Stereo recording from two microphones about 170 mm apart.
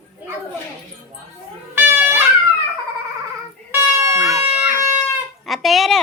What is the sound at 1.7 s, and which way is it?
Wind instrument, 10° right (ahead or behind).